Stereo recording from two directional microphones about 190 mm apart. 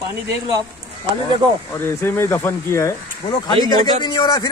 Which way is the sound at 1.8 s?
10° left (ahead or behind).